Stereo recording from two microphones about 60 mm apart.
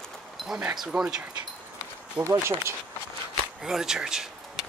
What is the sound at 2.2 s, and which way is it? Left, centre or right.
Speech, right.